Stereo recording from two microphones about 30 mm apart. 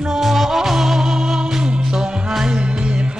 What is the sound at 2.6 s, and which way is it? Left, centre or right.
Music, right.